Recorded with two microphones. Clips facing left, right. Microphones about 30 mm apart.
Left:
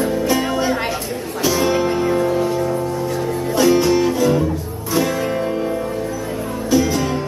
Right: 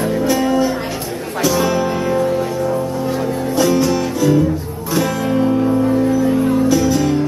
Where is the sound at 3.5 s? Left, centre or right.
Left.